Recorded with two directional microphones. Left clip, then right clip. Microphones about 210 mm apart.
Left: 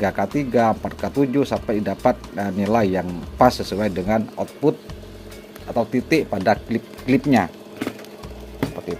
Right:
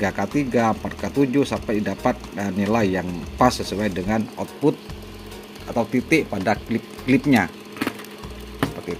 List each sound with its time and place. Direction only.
0.0 s speech: centre (ahead or behind)
5.8 s speech: 5° right (ahead or behind)